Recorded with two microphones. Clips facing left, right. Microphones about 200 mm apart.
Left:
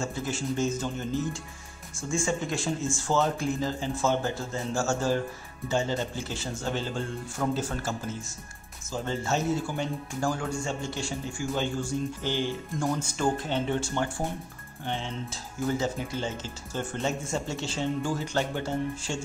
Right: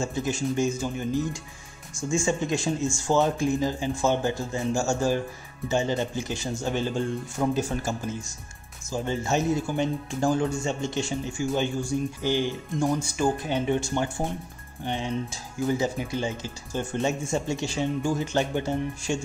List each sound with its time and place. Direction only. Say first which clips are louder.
0.0 s speech: right 4 dB; 20° right (ahead or behind)